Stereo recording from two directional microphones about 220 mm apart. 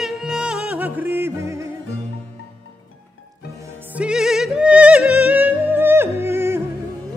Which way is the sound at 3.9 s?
5° right (ahead or behind).